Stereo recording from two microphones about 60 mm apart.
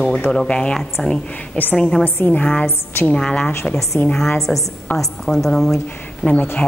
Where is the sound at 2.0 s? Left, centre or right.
Left.